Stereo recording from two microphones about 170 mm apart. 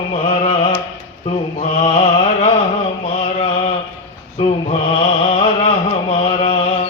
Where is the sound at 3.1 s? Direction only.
35° left (ahead or behind).